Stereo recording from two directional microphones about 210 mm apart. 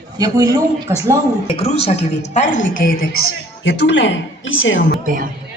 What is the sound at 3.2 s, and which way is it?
A woman's voice, 55° left (ahead or behind).